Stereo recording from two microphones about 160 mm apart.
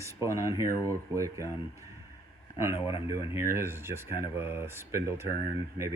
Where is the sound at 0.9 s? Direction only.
20° right (ahead or behind).